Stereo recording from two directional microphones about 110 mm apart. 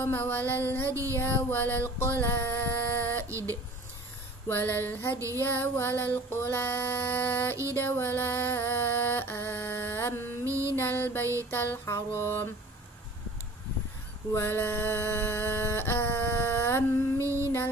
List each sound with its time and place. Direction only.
0.0 s music: 20° left (ahead or behind)
0.8 s female singing: 25° right (ahead or behind)
1.1 s music: 20° left (ahead or behind)
2.1 s a sound: 20° left (ahead or behind)
3.3 s speech: 25° right (ahead or behind)
4.5 s a sound: 15° left (ahead or behind)
5.1 s female singing: 30° right (ahead or behind)
5.4 s music: 20° left (ahead or behind)
10.4 s music: 25° right (ahead or behind)
10.8 s music: 20° left (ahead or behind)
14.3 s a sound: 20° left (ahead or behind)
17.2 s a sound: 25° right (ahead or behind)